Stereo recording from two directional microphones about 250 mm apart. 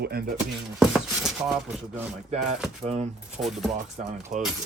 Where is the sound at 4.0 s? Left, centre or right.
Right.